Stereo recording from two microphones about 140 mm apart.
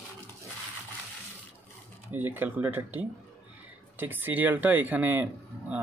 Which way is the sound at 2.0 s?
15° right (ahead or behind).